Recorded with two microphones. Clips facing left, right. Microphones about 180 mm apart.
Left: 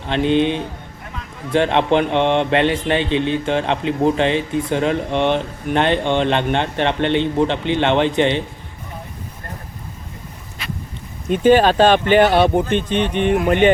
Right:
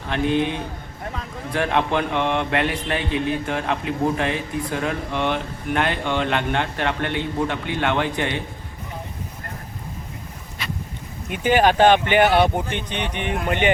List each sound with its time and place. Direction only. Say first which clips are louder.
0.1 s mantra: left 5 dB; 25° left (ahead or behind)
11.3 s speech: left 5 dB; 15° right (ahead or behind)